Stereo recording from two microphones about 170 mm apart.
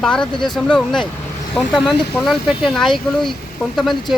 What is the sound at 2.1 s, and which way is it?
Speech, centre (ahead or behind).